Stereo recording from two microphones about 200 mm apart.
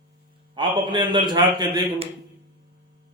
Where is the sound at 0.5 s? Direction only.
25° right (ahead or behind).